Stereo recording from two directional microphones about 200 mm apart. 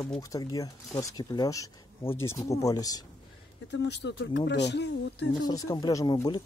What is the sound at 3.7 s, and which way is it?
Speech, 60° left (ahead or behind).